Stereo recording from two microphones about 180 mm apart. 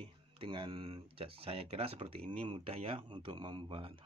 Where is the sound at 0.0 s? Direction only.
30° right (ahead or behind).